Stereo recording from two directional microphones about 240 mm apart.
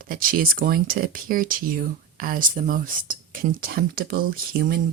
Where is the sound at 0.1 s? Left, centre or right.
Right.